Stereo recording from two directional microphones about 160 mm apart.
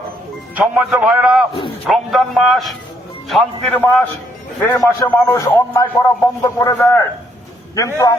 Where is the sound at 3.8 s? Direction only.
10° left (ahead or behind).